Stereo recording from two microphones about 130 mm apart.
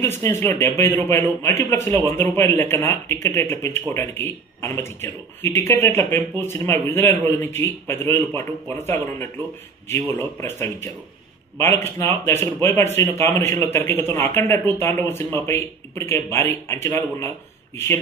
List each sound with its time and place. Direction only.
0.0 s speech: 20° left (ahead or behind)